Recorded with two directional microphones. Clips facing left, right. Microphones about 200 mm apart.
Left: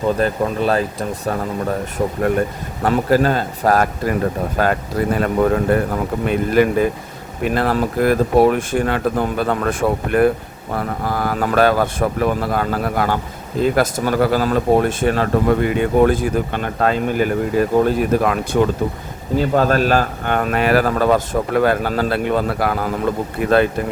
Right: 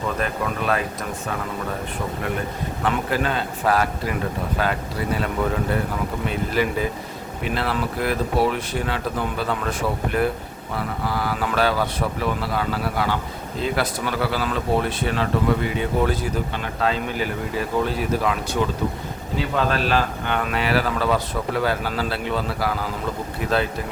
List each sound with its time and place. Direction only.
0.2 s a man's voice: 30° left (ahead or behind)
2.8 s a man's voice: 40° left (ahead or behind)